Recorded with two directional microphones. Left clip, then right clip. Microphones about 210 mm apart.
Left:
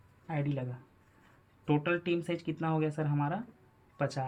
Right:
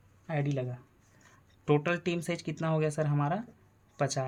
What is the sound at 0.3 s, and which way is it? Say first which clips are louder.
Speech: right 3 dB; 55° right (ahead or behind).